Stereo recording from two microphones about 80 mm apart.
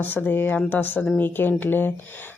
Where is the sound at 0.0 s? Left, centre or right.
Left.